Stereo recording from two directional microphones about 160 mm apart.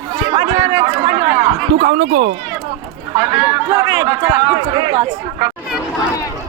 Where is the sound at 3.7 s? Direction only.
25° right (ahead or behind).